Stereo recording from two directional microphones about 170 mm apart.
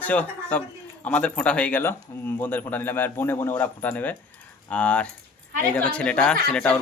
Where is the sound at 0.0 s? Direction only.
10° left (ahead or behind).